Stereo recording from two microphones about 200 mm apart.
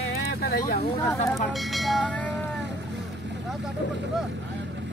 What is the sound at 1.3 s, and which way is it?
Speech, centre (ahead or behind).